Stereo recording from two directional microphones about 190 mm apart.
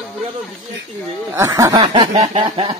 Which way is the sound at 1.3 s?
15° right (ahead or behind).